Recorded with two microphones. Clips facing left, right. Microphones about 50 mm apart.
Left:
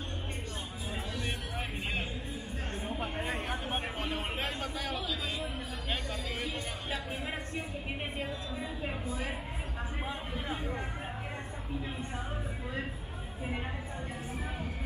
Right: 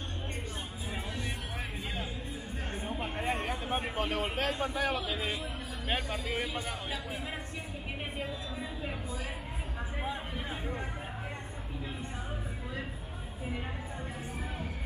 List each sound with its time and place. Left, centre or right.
4.1 s speech: right
4.6 s a man's voice: centre
8.2 s a woman's voice: centre
10.0 s a sound: centre